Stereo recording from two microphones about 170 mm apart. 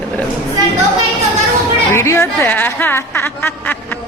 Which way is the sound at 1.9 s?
15° left (ahead or behind).